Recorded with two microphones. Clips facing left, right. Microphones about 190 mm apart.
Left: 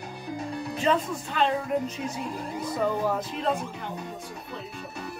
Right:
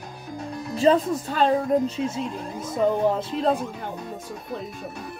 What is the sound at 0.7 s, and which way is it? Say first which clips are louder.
Speech: right 7 dB; 35° right (ahead or behind).